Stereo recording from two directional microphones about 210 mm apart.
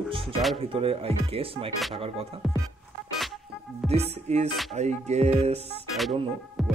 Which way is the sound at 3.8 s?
30° right (ahead or behind).